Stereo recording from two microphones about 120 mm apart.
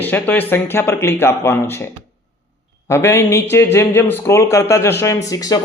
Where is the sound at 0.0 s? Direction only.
15° left (ahead or behind).